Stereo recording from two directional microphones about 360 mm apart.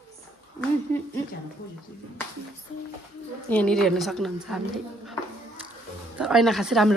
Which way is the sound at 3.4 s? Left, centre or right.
Centre.